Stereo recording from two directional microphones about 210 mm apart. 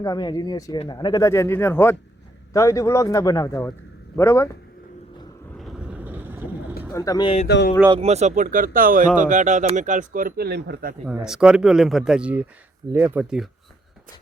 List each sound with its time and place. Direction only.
0.0 s speech: 20° left (ahead or behind)
5.5 s vehicle: centre (ahead or behind)
6.9 s speech: 15° left (ahead or behind)
7.4 s speech: 55° left (ahead or behind)
7.9 s speech: 30° right (ahead or behind); by 10.9 s 50° right (ahead or behind)
11.0 s speech: 5° right (ahead or behind)